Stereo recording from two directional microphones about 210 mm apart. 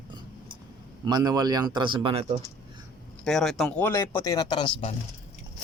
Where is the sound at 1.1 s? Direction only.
20° right (ahead or behind).